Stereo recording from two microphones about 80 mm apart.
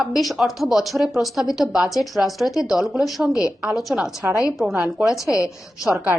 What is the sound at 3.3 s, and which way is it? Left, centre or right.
Speech, left.